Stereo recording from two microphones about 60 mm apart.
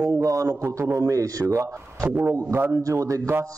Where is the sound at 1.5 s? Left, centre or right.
Right.